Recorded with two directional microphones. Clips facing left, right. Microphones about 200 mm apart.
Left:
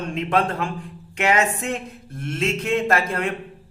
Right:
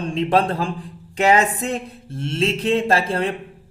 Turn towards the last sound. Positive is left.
turn(degrees=-30)  # may be behind; listen again after turning